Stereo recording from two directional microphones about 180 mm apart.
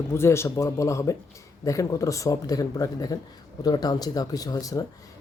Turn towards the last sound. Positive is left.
turn(degrees=20)  # may be behind; listen again after turning